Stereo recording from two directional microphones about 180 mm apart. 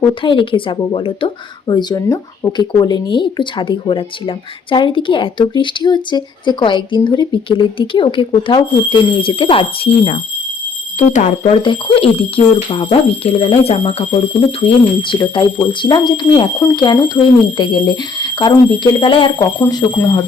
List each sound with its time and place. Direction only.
0.0 s speech: 25° left (ahead or behind)